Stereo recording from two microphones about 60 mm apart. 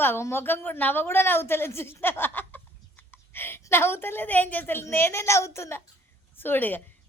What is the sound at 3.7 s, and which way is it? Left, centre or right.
A woman's voice, left.